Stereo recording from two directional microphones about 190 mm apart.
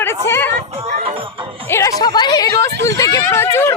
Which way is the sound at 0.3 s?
10° left (ahead or behind).